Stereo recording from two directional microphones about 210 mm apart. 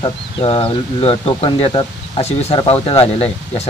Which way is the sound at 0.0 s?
25° left (ahead or behind).